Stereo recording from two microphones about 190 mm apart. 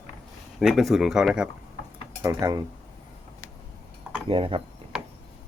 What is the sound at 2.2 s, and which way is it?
Speech, 15° right (ahead or behind).